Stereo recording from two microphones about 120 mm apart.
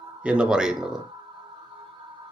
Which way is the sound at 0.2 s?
10° right (ahead or behind).